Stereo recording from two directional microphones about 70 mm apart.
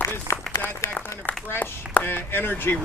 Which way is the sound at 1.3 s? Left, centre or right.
Left.